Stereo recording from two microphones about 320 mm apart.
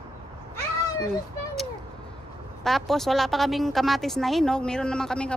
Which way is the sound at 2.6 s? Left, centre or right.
Centre.